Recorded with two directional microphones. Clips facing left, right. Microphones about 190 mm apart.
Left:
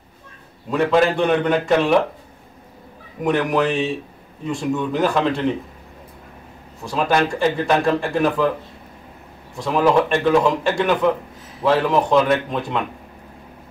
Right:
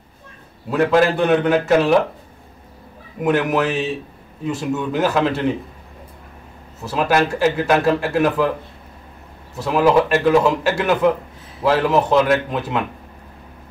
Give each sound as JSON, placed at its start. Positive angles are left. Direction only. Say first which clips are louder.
{"t": 0.7, "sound": "speech", "louder": "right 1 dB", "side_deg": -5}
{"t": 3.2, "sound": "speech", "louder": "right 1 dB", "side_deg": -5}
{"t": 6.8, "sound": "speech", "louder": "right 1 dB", "side_deg": -5}
{"t": 9.6, "sound": "speech", "louder": "right 1 dB", "side_deg": -5}